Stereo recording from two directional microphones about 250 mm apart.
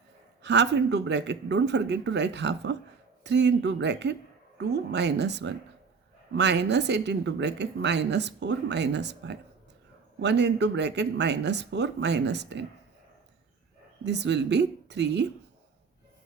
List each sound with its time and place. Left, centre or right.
0.4 s speech: right
14.0 s speech: right